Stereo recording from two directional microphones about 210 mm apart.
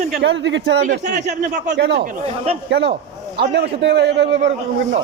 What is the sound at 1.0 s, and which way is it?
Speech, 35° right (ahead or behind).